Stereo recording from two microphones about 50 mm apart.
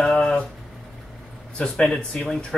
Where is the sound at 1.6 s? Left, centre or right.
Centre.